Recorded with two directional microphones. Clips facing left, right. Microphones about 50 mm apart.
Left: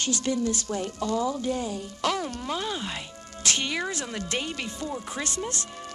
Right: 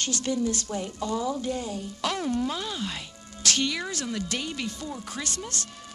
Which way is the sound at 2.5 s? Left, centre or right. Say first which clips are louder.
Left 2 dB; centre.